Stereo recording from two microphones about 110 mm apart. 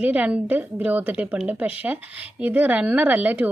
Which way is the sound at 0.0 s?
10° right (ahead or behind).